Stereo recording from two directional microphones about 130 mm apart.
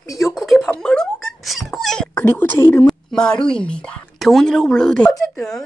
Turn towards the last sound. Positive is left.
turn(degrees=5)  # may be behind; listen again after turning